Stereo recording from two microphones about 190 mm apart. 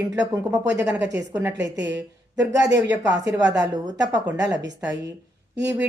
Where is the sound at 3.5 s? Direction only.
20° right (ahead or behind).